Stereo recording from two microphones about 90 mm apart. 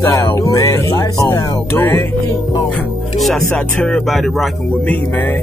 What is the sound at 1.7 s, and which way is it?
Music, 25° left (ahead or behind).